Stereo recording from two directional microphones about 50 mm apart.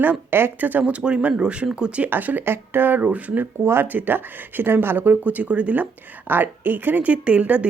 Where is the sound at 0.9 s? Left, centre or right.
Centre.